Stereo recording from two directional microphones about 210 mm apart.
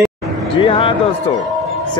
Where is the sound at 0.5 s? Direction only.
25° left (ahead or behind).